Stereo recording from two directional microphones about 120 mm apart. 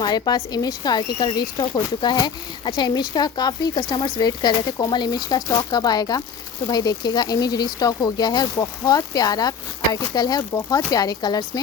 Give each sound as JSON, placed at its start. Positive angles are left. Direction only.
{"t": 0.0, "sound": "speech", "side_deg": 35}